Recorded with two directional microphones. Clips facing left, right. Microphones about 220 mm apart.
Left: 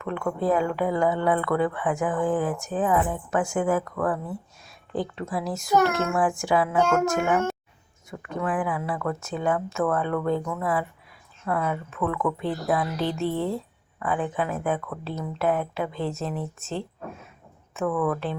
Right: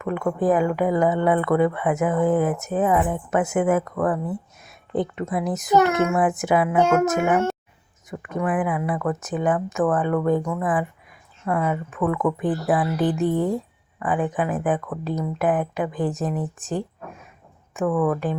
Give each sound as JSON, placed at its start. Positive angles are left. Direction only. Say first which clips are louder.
{"t": 0.0, "sound": "speech", "louder": "right 4 dB", "side_deg": -15}